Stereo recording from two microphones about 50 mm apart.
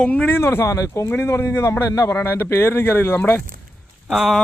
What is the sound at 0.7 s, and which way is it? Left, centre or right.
Speech, left.